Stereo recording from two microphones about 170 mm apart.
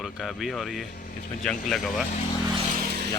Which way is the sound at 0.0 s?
Centre (ahead or behind).